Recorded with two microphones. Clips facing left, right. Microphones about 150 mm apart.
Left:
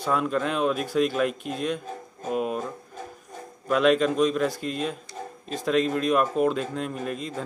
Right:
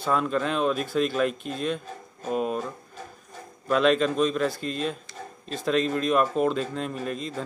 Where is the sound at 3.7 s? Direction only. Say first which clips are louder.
Left 1 dB; 5° left (ahead or behind).